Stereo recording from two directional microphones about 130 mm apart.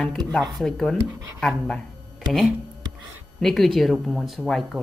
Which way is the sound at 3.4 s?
Centre (ahead or behind).